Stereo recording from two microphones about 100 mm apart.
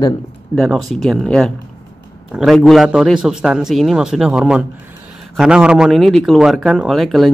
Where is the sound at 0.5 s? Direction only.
25° left (ahead or behind).